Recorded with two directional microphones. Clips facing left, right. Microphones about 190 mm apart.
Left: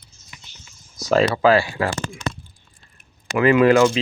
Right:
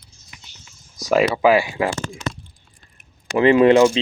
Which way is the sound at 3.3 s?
30° right (ahead or behind).